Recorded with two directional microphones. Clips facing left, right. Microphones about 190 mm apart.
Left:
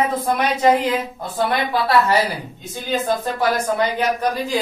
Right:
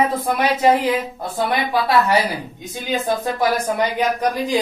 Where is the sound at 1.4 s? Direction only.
10° right (ahead or behind).